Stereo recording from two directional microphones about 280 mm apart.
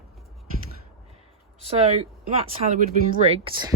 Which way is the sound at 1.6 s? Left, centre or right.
Right.